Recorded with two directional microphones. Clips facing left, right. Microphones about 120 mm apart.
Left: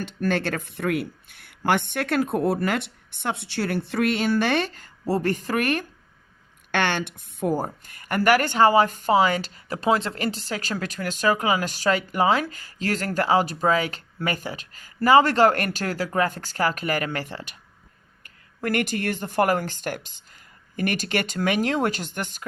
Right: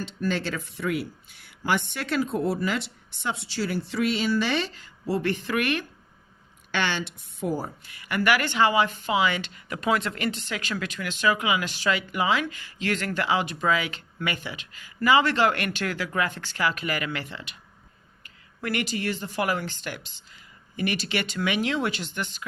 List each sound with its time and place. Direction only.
0.0 s speech: 55° left (ahead or behind)
6.7 s a woman's voice: 55° left (ahead or behind)